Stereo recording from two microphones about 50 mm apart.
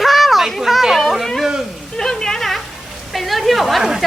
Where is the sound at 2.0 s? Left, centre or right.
Centre.